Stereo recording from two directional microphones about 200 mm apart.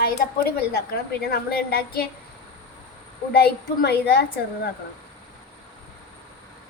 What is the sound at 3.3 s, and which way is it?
Speech, 50° left (ahead or behind).